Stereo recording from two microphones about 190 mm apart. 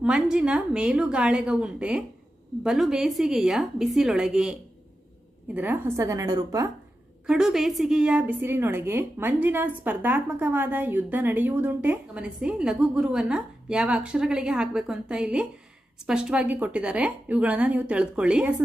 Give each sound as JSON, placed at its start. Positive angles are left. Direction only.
{"t": 0.0, "sound": "a woman's voice", "side_deg": -5}
{"t": 5.5, "sound": "a woman's voice", "side_deg": -10}
{"t": 7.3, "sound": "a woman's voice", "side_deg": -5}